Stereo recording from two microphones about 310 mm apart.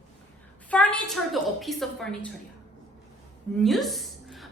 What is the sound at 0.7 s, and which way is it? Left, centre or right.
A woman's voice, centre.